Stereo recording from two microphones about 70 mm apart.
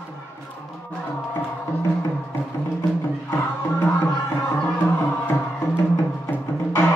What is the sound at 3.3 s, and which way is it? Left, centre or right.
Music, left.